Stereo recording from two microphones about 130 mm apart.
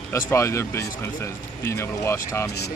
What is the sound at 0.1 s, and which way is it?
Speech, 20° left (ahead or behind).